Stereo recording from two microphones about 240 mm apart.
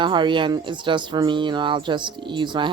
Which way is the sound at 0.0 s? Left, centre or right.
Centre.